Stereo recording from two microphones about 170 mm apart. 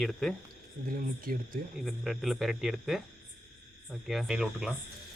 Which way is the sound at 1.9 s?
Centre (ahead or behind).